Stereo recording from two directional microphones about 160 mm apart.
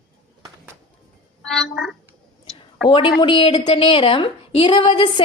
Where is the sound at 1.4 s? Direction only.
Centre (ahead or behind).